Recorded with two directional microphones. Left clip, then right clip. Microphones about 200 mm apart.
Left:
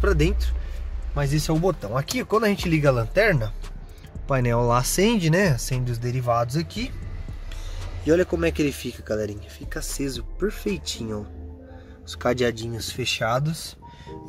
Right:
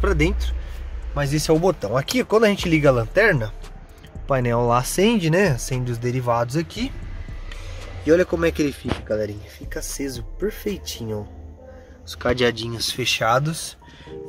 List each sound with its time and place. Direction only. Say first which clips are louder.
0.0 s speech: right 2 dB; centre (ahead or behind); by 11.1 s 15° left (ahead or behind)
12.1 s speech: right 3 dB; 5° left (ahead or behind)